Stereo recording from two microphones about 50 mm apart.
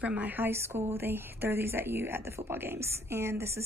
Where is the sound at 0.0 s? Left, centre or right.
Right.